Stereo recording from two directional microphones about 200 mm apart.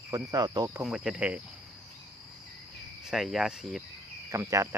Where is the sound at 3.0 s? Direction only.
Centre (ahead or behind).